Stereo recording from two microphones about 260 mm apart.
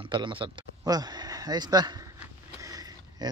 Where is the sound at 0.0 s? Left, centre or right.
Centre.